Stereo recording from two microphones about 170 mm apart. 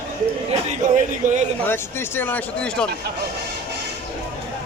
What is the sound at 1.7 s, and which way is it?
A man's voice, 10° left (ahead or behind).